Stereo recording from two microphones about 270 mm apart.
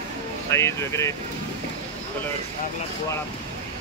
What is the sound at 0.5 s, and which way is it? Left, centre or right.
Speech, centre.